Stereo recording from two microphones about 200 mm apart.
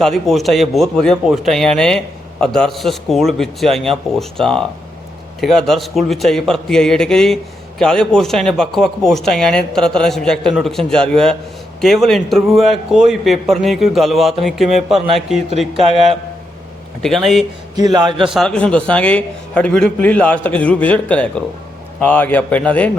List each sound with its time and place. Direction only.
0.0 s speech: centre (ahead or behind)
17.9 s a man's voice: 25° right (ahead or behind)
18.3 s a man's voice: 5° left (ahead or behind)